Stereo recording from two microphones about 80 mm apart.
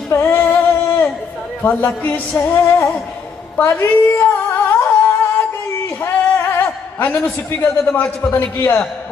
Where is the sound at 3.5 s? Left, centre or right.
Left.